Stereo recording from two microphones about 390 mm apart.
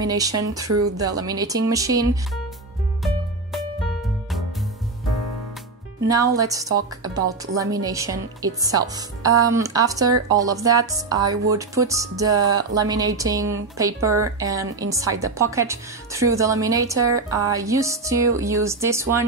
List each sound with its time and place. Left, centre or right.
0.0 s a woman's voice: centre
0.7 s speech: right
0.9 s a woman's voice: centre
5.9 s a woman's voice: centre